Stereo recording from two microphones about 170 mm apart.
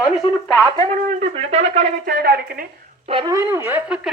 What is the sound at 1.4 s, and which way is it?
Speech, 40° right (ahead or behind).